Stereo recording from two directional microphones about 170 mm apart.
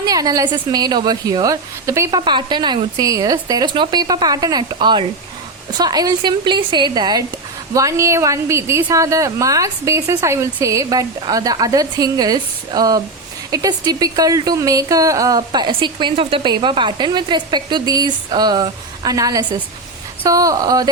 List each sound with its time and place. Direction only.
0.0 s a woman's voice: 20° right (ahead or behind)